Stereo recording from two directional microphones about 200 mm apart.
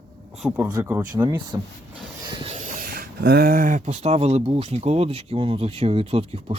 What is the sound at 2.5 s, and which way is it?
Speech, 40° right (ahead or behind).